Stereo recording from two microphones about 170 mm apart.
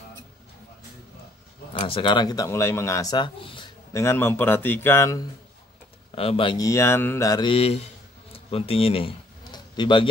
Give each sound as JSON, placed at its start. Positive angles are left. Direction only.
{"t": 1.7, "sound": "speech", "side_deg": 30}
{"t": 3.9, "sound": "speech", "side_deg": 15}
{"t": 6.1, "sound": "speech", "side_deg": 35}
{"t": 6.6, "sound": "mantra", "side_deg": 15}
{"t": 8.3, "sound": "a sound", "side_deg": 35}